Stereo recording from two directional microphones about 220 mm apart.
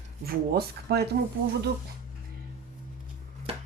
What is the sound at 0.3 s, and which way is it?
Speech, 45° right (ahead or behind).